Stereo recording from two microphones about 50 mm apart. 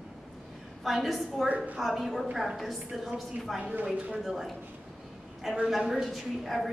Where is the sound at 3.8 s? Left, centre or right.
Centre.